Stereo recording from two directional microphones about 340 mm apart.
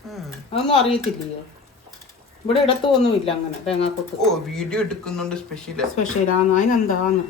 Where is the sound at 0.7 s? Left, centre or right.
Centre.